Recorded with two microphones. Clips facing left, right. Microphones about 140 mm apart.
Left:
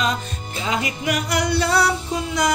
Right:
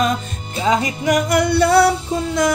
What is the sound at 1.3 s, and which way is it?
Music, 55° right (ahead or behind).